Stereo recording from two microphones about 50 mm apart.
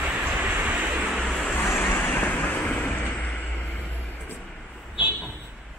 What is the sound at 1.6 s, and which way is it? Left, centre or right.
Vehicle, left.